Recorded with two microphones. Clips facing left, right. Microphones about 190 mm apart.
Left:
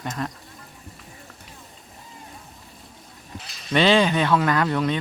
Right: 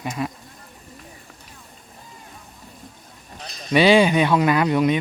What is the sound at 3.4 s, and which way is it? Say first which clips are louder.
Sheep: right 6 dB; 35° right (ahead or behind).